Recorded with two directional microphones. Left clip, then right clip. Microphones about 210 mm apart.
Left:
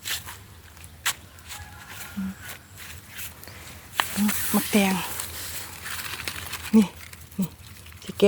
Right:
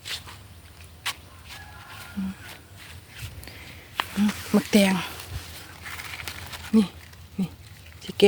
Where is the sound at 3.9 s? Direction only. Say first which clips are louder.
Left 2 dB; 45° left (ahead or behind).